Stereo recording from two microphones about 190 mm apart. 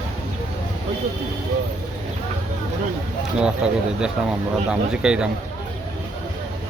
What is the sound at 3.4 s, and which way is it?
Speech, 5° right (ahead or behind).